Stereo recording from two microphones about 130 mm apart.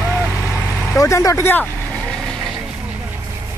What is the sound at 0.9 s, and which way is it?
Vehicle, 25° left (ahead or behind).